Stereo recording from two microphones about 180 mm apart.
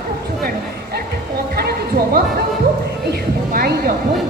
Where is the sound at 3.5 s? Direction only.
55° right (ahead or behind).